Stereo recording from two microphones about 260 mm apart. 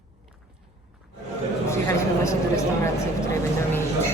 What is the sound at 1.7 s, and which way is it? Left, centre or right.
Speech, centre.